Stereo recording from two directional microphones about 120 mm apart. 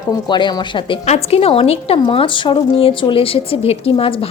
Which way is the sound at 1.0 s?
60° left (ahead or behind).